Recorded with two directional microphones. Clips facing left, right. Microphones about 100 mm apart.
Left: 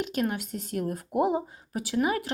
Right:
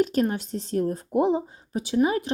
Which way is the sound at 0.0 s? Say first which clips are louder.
Right 6 dB; 35° right (ahead or behind).